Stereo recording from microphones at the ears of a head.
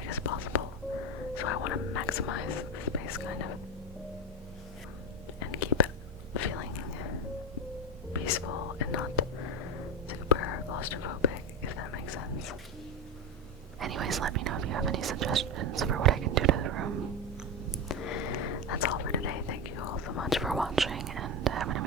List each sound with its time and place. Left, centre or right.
0.0 s whispering: left
1.4 s speech: left
5.4 s whispering: left
13.7 s whispering: right
17.8 s whispering: left
20.9 s whispering: right